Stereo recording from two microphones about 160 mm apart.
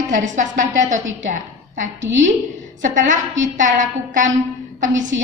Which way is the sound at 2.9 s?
55° right (ahead or behind).